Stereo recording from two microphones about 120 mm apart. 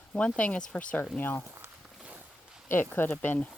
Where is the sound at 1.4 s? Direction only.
20° right (ahead or behind).